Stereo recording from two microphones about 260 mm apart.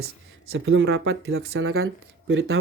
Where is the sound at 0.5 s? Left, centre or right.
Right.